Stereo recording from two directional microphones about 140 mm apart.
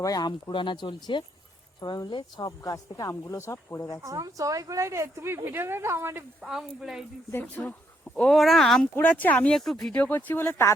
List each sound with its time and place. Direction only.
0.0 s speech: 30° left (ahead or behind)
4.0 s speech: 25° right (ahead or behind)
6.4 s speech: 5° right (ahead or behind)
7.3 s speech: 15° left (ahead or behind)